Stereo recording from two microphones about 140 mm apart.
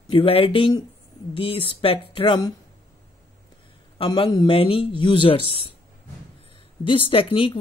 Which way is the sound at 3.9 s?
35° left (ahead or behind).